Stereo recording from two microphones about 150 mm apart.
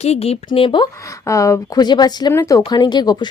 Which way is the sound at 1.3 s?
20° left (ahead or behind).